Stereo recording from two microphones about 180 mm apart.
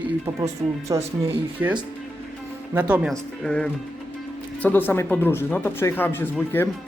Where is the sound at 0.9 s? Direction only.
20° right (ahead or behind).